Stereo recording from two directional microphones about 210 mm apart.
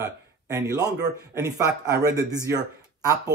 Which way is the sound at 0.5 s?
15° right (ahead or behind).